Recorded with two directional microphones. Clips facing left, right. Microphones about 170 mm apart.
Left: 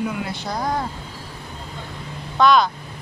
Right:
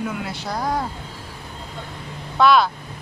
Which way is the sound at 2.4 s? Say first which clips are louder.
Even; 5° right (ahead or behind).